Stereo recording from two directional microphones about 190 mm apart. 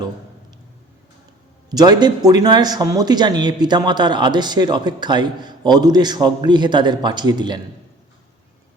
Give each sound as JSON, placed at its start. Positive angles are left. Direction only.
{"t": 1.7, "sound": "speech", "side_deg": -20}